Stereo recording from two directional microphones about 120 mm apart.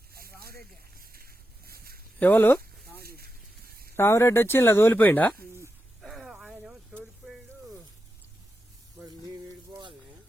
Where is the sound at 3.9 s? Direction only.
20° left (ahead or behind).